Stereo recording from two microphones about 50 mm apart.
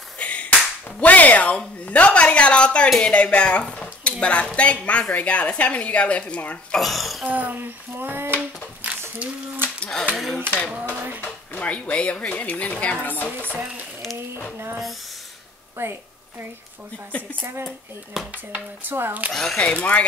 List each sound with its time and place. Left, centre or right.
0.2 s clapping: left
1.0 s a woman's voice: left
6.7 s speech: centre
7.2 s child singing: right
9.2 s speech: right
10.1 s speech: centre
11.5 s a woman's voice: left
15.8 s a woman's voice: right
18.2 s speech: centre
18.9 s child singing: right
19.3 s speech: centre
19.6 s a woman's voice: left